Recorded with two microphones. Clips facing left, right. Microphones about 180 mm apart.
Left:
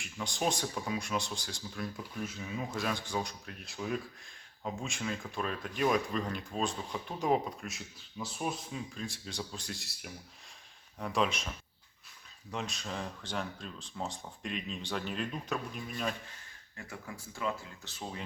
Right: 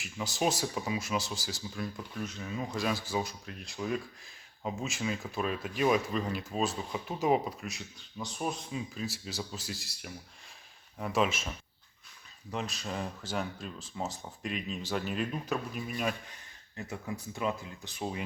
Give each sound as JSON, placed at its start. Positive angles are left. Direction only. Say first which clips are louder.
{"t": 0.0, "sound": "speech", "louder": "right 3 dB", "side_deg": -5}
{"t": 16.7, "sound": "speech", "louder": "right 6 dB", "side_deg": -20}